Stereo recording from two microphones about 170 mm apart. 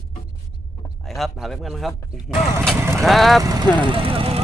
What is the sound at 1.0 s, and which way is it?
Speech, centre (ahead or behind).